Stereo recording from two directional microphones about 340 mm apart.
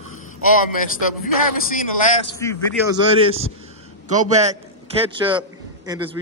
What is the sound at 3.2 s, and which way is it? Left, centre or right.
A man's voice, centre.